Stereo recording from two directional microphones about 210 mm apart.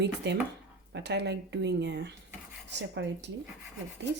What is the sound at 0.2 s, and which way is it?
Speech, 55° right (ahead or behind).